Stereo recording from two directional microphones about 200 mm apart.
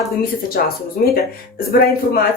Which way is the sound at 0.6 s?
50° left (ahead or behind).